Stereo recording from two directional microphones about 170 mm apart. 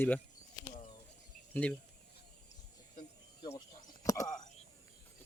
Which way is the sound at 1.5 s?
5° left (ahead or behind).